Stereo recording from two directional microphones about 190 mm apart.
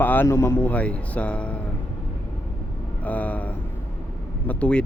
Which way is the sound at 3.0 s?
10° left (ahead or behind).